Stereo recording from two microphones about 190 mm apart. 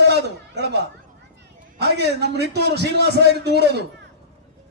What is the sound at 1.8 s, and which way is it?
A man's voice, 60° right (ahead or behind).